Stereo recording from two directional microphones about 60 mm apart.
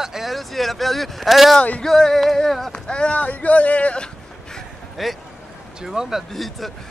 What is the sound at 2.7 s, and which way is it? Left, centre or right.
Speech, centre.